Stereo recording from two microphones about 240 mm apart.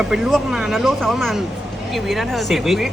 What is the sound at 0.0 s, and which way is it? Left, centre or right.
Speech, centre.